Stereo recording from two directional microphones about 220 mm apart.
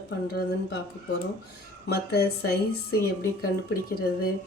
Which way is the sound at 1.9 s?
45° left (ahead or behind).